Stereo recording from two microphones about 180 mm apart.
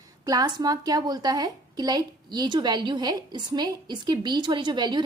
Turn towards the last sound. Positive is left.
turn(degrees=-25)  # may be behind; listen again after turning